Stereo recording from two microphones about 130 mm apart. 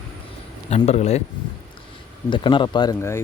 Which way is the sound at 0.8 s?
55° left (ahead or behind).